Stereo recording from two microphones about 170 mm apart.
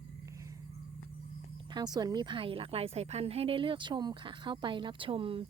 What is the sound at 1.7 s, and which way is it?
A woman's voice, 25° right (ahead or behind).